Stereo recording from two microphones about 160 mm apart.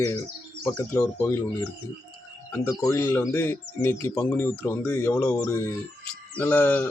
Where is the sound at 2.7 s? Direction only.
20° left (ahead or behind).